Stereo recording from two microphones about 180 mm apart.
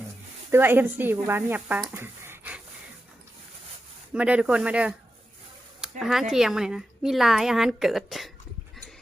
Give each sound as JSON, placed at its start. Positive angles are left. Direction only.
{"t": 0.5, "sound": "speech", "side_deg": -10}
{"t": 1.8, "sound": "a sound", "side_deg": -15}
{"t": 4.1, "sound": "speech", "side_deg": -5}
{"t": 6.0, "sound": "a woman's voice", "side_deg": 0}